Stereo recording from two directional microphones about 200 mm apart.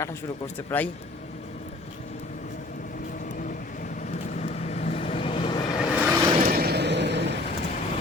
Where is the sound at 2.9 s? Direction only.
40° left (ahead or behind); by 5.8 s 20° left (ahead or behind).